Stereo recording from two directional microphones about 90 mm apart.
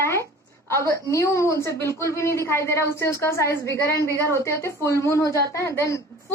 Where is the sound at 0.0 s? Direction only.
30° left (ahead or behind).